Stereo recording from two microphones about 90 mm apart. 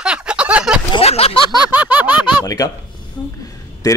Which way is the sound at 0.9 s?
90° left.